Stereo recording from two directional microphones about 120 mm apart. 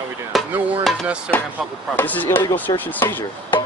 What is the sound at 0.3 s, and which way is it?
Hammer, centre (ahead or behind).